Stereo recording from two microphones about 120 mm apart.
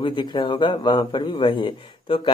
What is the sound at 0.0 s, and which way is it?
A man's voice, 40° left (ahead or behind).